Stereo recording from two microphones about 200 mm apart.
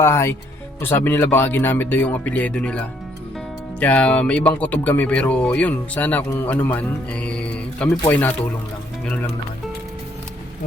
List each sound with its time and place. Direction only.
0.0 s speech: 10° left (ahead or behind)